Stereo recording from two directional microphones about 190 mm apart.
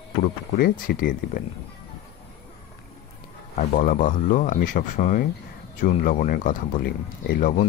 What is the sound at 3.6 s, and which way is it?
Speech, 45° left (ahead or behind).